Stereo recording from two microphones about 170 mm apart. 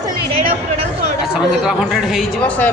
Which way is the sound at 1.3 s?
5° right (ahead or behind).